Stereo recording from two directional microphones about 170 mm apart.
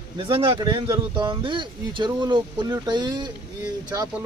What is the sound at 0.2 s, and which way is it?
Speech, 30° right (ahead or behind).